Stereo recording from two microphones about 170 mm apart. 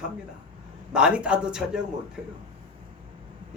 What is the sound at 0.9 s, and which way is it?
Speech, 5° right (ahead or behind).